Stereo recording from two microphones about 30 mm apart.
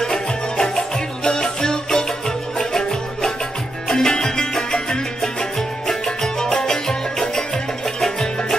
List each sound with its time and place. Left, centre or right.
0.0 s music: centre
5.2 s music: centre